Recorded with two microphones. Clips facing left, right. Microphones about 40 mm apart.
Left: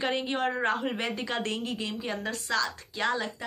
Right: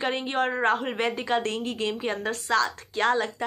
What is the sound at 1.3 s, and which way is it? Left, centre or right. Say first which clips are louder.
Speech: right 9 dB; right.